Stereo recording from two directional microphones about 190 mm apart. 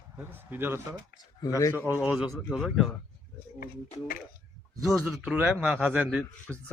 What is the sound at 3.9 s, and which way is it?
Speech, 45° left (ahead or behind).